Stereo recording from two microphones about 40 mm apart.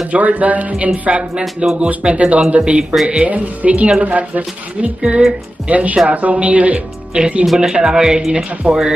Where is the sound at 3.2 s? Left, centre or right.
Right.